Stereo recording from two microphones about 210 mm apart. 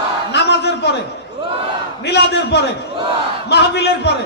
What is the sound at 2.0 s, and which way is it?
A man's voice, 55° left (ahead or behind).